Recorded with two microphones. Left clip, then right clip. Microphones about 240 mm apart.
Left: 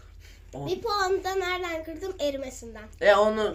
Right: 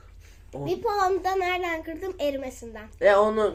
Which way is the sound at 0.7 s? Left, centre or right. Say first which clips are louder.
Right 2 dB; right.